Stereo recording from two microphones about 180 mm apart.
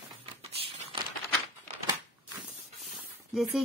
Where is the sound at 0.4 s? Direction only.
35° right (ahead or behind).